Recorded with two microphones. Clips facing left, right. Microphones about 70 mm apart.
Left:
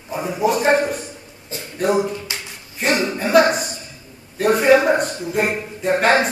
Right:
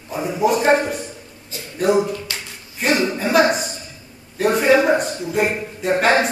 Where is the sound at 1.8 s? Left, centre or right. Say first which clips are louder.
Right 2 dB; centre.